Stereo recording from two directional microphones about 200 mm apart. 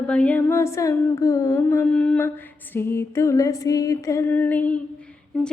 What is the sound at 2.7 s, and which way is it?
A woman's voice, 10° left (ahead or behind).